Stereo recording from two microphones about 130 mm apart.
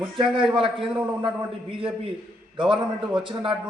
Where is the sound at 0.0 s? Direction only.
40° right (ahead or behind).